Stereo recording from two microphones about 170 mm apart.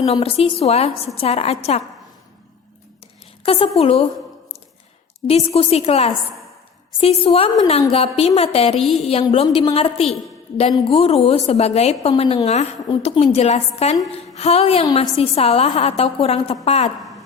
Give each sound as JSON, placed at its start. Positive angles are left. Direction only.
{"t": 0.0, "sound": "a woman's voice", "side_deg": 35}
{"t": 3.4, "sound": "a woman's voice", "side_deg": 35}
{"t": 5.3, "sound": "a woman's voice", "side_deg": 35}
{"t": 8.8, "sound": "a woman's voice", "side_deg": 0}
{"t": 9.0, "sound": "a woman's voice", "side_deg": 35}